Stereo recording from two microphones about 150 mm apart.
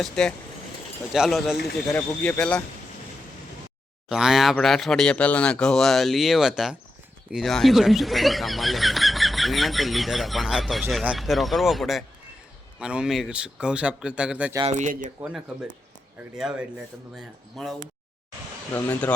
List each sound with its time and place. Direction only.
0.0 s speech: 5° left (ahead or behind)
1.9 s speech: 10° left (ahead or behind)
4.1 s speech: 5° right (ahead or behind)
14.7 s speech: 55° right (ahead or behind)
15.2 s speech: 5° right (ahead or behind)
18.7 s speech: 10° left (ahead or behind)